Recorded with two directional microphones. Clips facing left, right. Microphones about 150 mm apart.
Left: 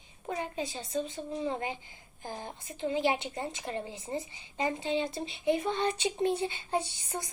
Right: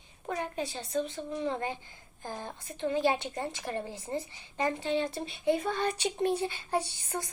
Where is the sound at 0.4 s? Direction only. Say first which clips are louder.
Right 1 dB; 60° right (ahead or behind).